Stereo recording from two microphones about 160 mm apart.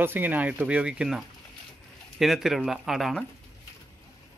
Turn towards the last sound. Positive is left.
turn(degrees=0)  # may be behind; listen again after turning